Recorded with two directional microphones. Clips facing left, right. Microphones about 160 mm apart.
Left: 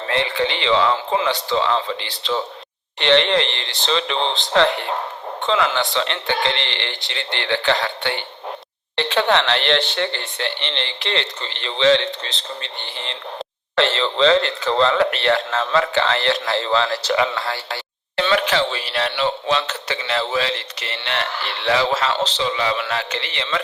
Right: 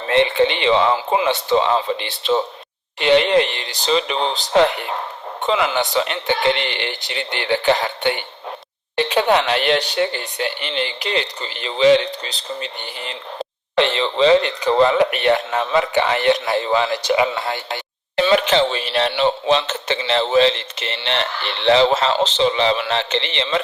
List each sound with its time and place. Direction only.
0.1 s speech: 20° right (ahead or behind)
0.9 s speech: 10° right (ahead or behind)